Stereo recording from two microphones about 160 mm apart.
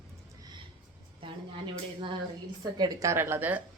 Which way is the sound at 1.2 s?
30° right (ahead or behind).